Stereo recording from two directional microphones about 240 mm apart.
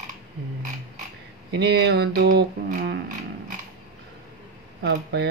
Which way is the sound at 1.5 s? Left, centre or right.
Right.